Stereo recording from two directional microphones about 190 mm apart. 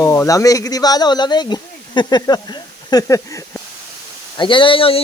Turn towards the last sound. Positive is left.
turn(degrees=30)  # may be behind; listen again after turning